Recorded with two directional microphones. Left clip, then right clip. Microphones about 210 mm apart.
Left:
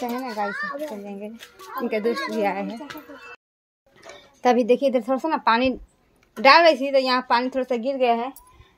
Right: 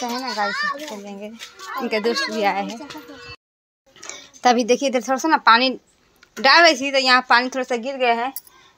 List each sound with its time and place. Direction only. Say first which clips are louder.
0.0 s a woman's voice: right 2 dB; 5° left (ahead or behind)
0.3 s a child's voice: right 7 dB; 20° right (ahead or behind)
0.6 s a child's voice: right 4 dB; 30° left (ahead or behind)
1.0 s a woman's voice: right 2 dB; 5° left (ahead or behind)
4.1 s a woman's voice: right 3 dB; centre (ahead or behind)